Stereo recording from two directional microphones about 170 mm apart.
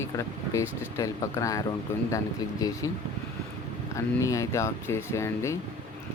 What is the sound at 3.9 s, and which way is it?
Speech, 20° left (ahead or behind).